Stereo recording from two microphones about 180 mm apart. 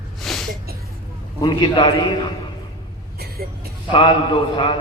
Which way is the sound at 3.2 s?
55° right (ahead or behind).